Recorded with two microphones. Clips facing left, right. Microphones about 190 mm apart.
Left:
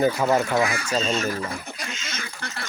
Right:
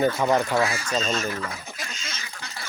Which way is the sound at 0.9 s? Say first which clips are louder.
Left 2 dB; centre (ahead or behind).